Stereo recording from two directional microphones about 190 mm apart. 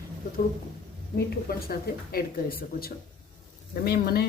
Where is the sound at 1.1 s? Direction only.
55° left (ahead or behind).